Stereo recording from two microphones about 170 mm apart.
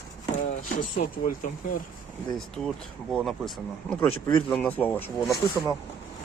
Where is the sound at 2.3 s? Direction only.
Centre (ahead or behind).